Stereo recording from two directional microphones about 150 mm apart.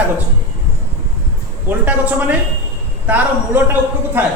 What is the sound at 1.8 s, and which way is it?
Speech, 10° right (ahead or behind).